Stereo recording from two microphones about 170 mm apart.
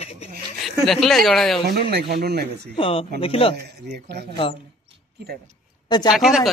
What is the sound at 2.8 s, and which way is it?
Speech, 30° left (ahead or behind).